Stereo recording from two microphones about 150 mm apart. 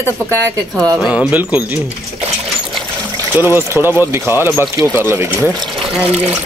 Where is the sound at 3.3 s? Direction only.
15° right (ahead or behind).